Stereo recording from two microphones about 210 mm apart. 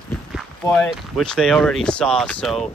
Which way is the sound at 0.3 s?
Centre (ahead or behind).